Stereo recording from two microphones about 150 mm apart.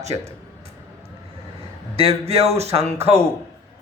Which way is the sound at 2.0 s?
40° right (ahead or behind).